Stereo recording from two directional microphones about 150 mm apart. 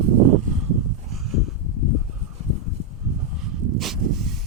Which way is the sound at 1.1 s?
Centre (ahead or behind).